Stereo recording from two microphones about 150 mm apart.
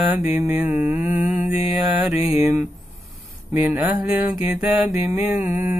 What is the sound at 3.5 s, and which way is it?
Mantra, 10° right (ahead or behind).